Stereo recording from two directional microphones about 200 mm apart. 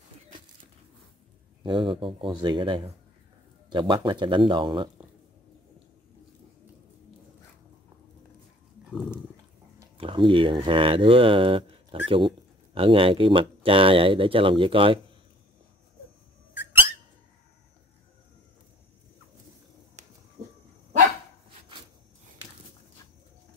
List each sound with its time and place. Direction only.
1.6 s speech: 25° right (ahead or behind)
8.9 s dog: centre (ahead or behind)
9.9 s speech: 25° right (ahead or behind)